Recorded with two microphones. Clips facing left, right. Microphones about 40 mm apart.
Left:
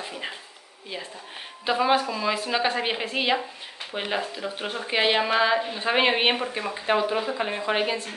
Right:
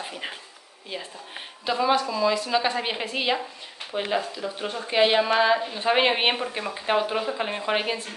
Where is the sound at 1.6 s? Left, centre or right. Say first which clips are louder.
Left 1 dB; left.